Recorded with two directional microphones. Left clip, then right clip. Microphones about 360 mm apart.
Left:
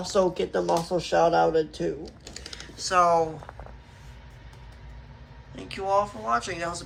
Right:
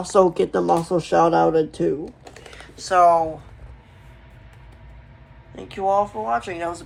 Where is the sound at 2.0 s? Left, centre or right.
Centre.